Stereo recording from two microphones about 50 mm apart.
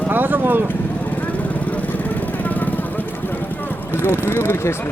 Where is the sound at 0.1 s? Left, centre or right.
Right.